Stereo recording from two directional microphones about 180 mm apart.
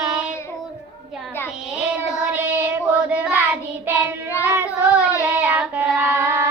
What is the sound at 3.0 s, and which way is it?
Child singing, 10° right (ahead or behind).